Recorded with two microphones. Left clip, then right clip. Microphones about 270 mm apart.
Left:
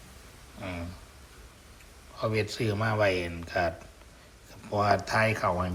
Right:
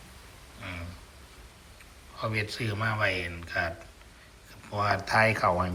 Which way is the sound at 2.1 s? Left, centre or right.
Centre.